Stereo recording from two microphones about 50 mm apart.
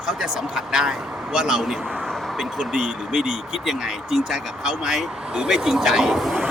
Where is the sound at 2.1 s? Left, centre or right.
Centre.